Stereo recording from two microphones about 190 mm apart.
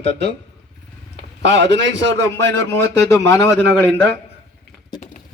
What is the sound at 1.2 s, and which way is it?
A man's voice, 65° right (ahead or behind).